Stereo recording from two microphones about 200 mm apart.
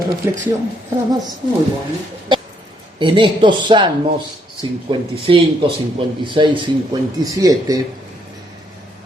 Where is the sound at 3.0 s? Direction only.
25° right (ahead or behind).